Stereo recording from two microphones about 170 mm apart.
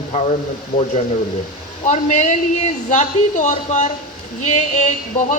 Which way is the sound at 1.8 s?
45° left (ahead or behind).